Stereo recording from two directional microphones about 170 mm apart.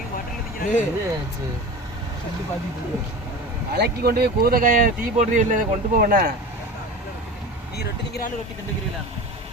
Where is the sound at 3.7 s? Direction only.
70° right (ahead or behind).